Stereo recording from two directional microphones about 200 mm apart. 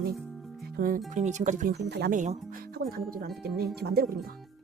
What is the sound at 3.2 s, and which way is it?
Speech, 50° right (ahead or behind).